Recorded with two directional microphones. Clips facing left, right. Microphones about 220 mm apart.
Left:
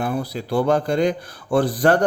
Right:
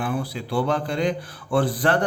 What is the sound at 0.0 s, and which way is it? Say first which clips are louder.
Speech: left 3 dB; 40° left (ahead or behind).